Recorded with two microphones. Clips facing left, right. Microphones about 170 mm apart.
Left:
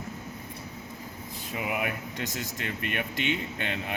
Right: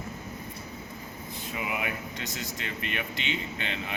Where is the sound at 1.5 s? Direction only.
50° left (ahead or behind).